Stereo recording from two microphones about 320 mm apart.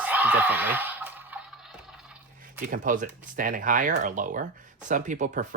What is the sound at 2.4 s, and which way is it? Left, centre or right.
Speech, right.